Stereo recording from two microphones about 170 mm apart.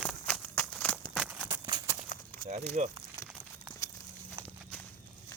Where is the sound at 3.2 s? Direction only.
20° left (ahead or behind).